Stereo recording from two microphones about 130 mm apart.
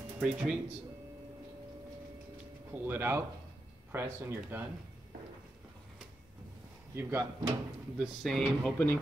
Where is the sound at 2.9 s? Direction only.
15° right (ahead or behind).